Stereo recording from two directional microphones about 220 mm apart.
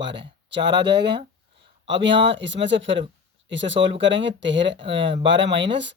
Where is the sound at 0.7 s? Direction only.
50° right (ahead or behind).